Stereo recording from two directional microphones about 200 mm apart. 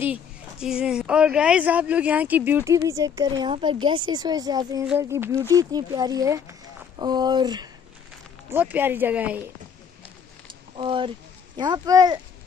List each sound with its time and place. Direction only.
0.0 s speech: 5° right (ahead or behind)
8.5 s speech: 10° right (ahead or behind)
10.8 s speech: 25° right (ahead or behind)